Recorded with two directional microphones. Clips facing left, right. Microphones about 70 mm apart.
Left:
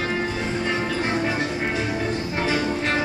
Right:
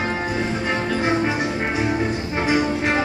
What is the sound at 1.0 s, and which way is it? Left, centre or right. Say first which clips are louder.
Music: right 3 dB; centre.